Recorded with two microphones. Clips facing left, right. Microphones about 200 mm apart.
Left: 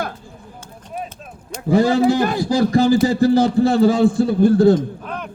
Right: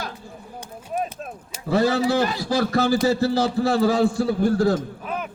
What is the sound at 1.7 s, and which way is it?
A man's voice, 15° left (ahead or behind).